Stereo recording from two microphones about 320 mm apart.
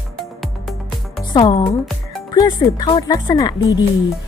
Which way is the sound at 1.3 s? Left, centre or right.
Centre.